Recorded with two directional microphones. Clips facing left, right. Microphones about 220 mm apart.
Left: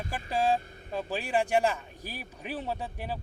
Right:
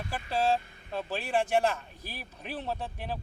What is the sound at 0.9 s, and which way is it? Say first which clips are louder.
Speech: left 1 dB; 10° left (ahead or behind).